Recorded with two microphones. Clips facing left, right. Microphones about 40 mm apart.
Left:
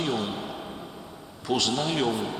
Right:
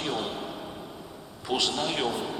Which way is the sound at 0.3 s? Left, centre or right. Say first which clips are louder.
Left 1 dB; centre.